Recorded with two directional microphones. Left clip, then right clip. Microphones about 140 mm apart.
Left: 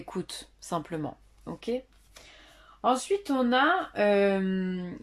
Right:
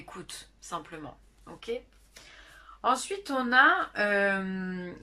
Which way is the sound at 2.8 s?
20° left (ahead or behind).